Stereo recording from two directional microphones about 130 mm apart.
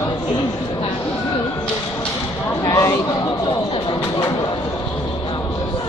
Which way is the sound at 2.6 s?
25° left (ahead or behind).